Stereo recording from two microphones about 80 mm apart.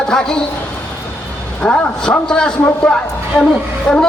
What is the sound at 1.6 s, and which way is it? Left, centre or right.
A man's voice, centre.